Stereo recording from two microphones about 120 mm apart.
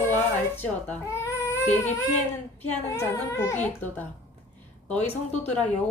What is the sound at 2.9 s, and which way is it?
A child's voice, 25° left (ahead or behind).